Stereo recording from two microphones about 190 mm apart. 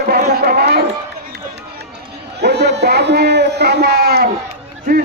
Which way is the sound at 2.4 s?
60° right (ahead or behind).